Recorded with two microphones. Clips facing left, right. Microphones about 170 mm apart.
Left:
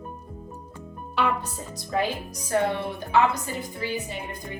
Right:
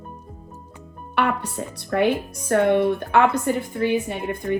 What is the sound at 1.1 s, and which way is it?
Speech, 65° right (ahead or behind).